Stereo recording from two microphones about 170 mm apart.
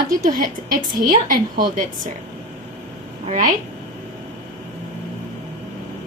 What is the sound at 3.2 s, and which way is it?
Speech, 45° right (ahead or behind).